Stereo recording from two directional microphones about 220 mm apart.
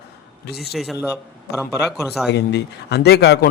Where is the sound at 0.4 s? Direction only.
45° left (ahead or behind).